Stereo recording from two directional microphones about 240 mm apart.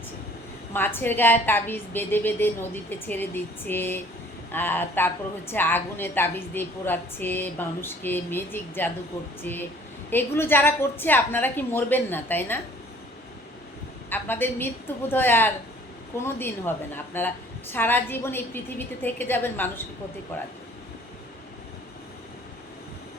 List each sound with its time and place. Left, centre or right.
0.7 s a woman's voice: centre
3.7 s a woman's voice: centre
14.1 s a woman's voice: centre